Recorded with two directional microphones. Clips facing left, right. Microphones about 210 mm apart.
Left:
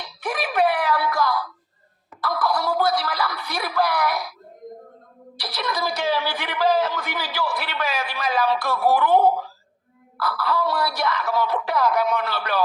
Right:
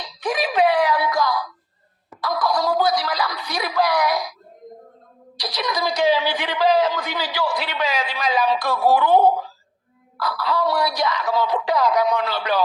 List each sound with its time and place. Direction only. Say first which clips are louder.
0.0 s wail: right 4 dB; 15° right (ahead or behind)
2.2 s a sound: right 2 dB; 15° right (ahead or behind)
5.4 s speech: right 2 dB; 15° right (ahead or behind)